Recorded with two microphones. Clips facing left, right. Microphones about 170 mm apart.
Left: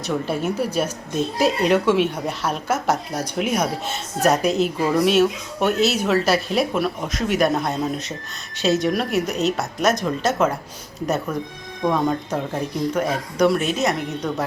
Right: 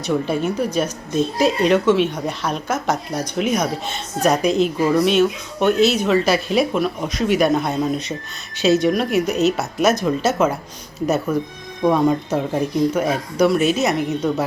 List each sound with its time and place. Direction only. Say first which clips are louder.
0.0 s speech: right 3 dB; 5° left (ahead or behind)